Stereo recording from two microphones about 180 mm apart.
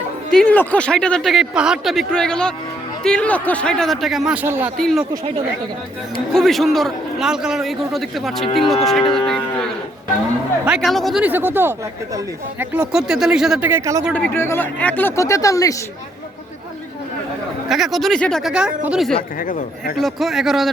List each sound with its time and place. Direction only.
0.3 s speech: 5° left (ahead or behind); by 4.7 s 10° right (ahead or behind)
4.8 s speech: 5° left (ahead or behind)
6.3 s speech: centre (ahead or behind); by 14.0 s 15° right (ahead or behind)
14.1 s speech: 10° left (ahead or behind)
17.7 s speech: centre (ahead or behind)
19.4 s speech: 50° left (ahead or behind)
20.0 s speech: centre (ahead or behind)